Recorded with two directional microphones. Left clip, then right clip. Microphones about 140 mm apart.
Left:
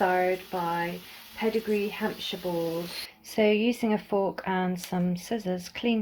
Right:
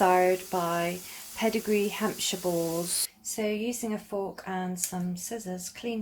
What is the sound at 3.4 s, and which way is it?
Speech, 50° left (ahead or behind).